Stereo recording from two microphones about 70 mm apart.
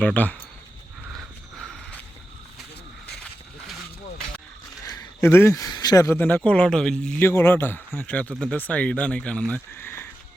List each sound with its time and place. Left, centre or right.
0.0 s speech: left
1.1 s mechanisms: centre
5.2 s a man's voice: left
5.7 s speech: left
6.1 s speech: left; by 7.2 s centre
7.2 s a man's voice: left
7.9 s speech: left
9.7 s a man's voice: left